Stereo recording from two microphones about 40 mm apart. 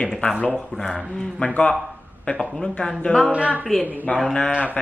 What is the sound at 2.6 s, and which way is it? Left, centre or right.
Speech, centre.